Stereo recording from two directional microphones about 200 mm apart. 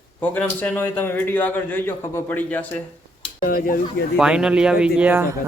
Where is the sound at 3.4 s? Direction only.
45° left (ahead or behind).